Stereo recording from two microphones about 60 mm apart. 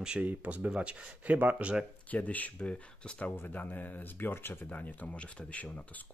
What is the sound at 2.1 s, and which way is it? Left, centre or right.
Speech, left.